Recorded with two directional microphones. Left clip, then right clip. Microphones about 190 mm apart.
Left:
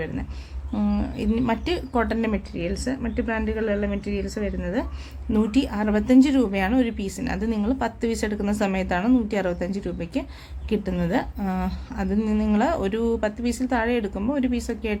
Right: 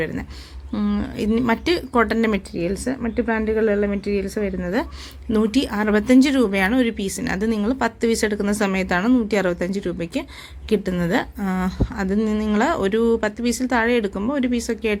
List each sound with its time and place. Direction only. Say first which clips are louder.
0.7 s a woman's voice: right 2 dB; 10° right (ahead or behind)